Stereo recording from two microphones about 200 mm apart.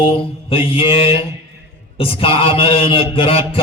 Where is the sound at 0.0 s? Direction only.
25° left (ahead or behind).